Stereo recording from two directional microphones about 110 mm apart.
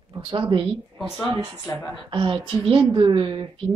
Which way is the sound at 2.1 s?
50° right (ahead or behind).